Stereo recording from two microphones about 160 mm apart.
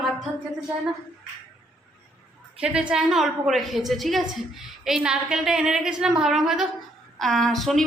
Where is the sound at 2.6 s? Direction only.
5° right (ahead or behind).